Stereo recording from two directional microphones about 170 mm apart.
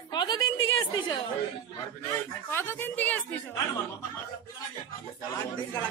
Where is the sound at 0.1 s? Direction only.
25° left (ahead or behind).